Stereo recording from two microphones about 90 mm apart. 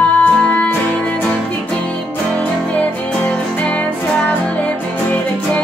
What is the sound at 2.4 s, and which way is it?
Music, 15° left (ahead or behind).